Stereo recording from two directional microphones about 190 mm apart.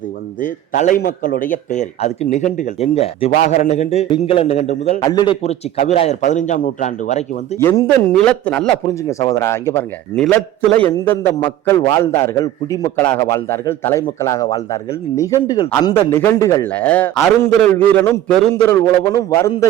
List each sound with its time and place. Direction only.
0.4 s a man's voice: 45° left (ahead or behind)
5.0 s a man's voice: 25° left (ahead or behind)
7.6 s speech: 15° left (ahead or behind)
9.0 s a man's voice: 15° left (ahead or behind)